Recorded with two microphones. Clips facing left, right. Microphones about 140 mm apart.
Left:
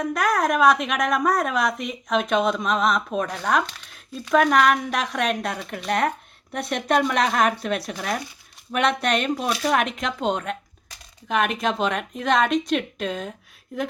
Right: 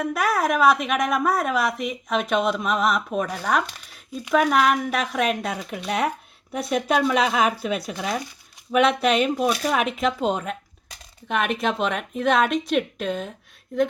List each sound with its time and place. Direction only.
0.0 s a woman's voice: 5° right (ahead or behind)